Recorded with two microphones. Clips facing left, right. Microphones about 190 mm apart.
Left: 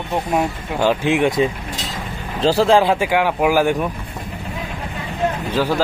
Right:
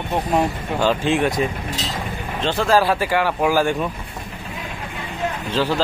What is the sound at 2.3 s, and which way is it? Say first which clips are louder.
Speech: left 6 dB; 35° left (ahead or behind).